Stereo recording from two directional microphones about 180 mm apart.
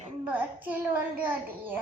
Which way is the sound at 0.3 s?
10° right (ahead or behind).